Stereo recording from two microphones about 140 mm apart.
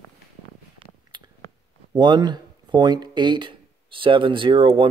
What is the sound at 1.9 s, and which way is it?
Speech, 30° right (ahead or behind).